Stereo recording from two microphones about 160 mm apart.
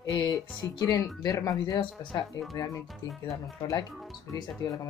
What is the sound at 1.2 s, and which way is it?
Speech, 20° left (ahead or behind).